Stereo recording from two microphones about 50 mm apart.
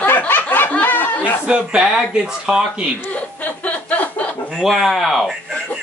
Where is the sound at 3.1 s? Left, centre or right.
Left.